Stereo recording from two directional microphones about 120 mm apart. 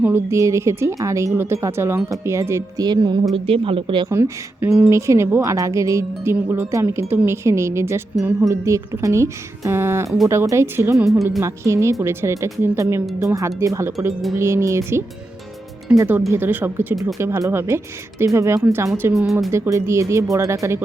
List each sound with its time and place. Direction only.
0.0 s a woman's voice: 20° right (ahead or behind); by 3.2 s 35° right (ahead or behind)
3.3 s speech: 50° right (ahead or behind)
4.1 s a woman's voice: 20° right (ahead or behind)
19.1 s speech: centre (ahead or behind)
19.5 s a woman's voice: 25° right (ahead or behind)